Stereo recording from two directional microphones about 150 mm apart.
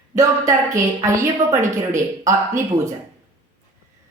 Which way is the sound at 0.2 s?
20° right (ahead or behind).